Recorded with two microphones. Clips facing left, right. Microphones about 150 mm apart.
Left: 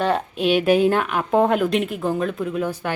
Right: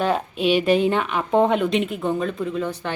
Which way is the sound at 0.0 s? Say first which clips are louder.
Even; centre (ahead or behind).